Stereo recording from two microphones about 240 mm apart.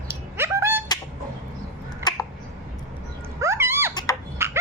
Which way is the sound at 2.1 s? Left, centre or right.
Centre.